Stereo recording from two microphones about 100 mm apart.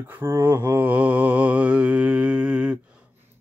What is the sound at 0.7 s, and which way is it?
Music, 15° right (ahead or behind).